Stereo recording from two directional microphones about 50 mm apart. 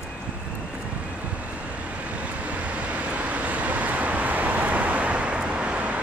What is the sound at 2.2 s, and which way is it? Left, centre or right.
Vehicle, right.